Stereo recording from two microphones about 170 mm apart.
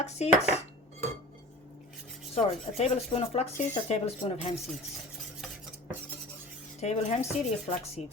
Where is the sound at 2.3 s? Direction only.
40° left (ahead or behind).